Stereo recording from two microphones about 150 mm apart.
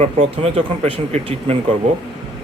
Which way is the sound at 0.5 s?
40° right (ahead or behind).